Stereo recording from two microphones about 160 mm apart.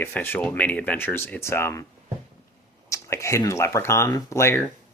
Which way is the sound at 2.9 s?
20° left (ahead or behind).